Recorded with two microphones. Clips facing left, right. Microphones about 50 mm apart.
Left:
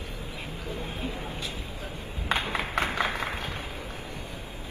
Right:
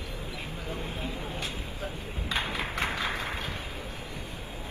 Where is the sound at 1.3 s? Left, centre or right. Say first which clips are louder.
Even; right.